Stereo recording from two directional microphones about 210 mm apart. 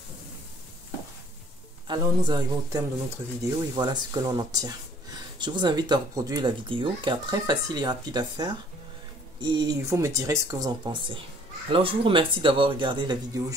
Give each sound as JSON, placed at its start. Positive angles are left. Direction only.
{"t": 1.9, "sound": "speech", "side_deg": -20}